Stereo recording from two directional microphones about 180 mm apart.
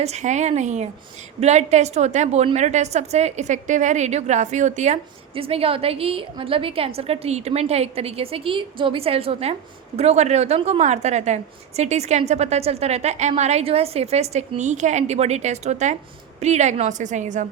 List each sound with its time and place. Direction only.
0.0 s a woman's voice: 40° right (ahead or behind)